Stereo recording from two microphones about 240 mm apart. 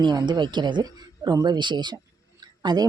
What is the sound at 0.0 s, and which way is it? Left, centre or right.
Speech, centre.